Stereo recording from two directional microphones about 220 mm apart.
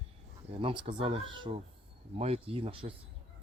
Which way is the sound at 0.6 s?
20° right (ahead or behind).